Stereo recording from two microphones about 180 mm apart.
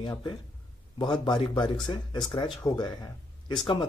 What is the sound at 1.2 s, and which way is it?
Speech, 25° left (ahead or behind).